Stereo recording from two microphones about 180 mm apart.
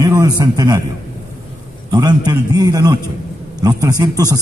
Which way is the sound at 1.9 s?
25° right (ahead or behind).